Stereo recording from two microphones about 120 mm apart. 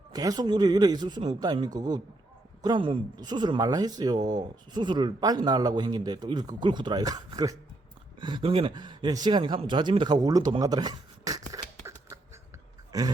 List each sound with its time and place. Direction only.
0.1 s speech: 35° right (ahead or behind)
10.6 s beatboxing: 35° right (ahead or behind)